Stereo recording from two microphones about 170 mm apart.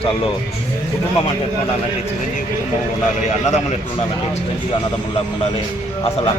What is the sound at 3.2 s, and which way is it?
Speech, 45° left (ahead or behind).